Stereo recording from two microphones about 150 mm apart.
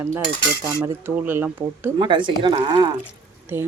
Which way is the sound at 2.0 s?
35° right (ahead or behind).